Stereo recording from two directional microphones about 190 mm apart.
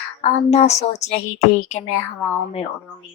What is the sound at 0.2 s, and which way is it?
A woman's voice, 35° left (ahead or behind).